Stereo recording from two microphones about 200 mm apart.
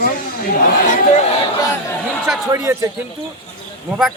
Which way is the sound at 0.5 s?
40° left (ahead or behind).